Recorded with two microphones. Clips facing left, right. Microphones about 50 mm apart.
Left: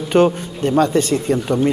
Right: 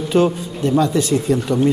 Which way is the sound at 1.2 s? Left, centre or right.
Left.